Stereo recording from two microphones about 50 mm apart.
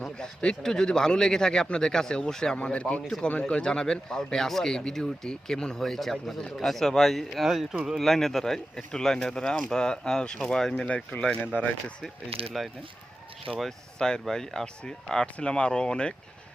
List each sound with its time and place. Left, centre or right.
0.0 s speech: centre
2.7 s speech: left
3.4 s speech: centre
10.8 s speech: left
13.6 s speech: centre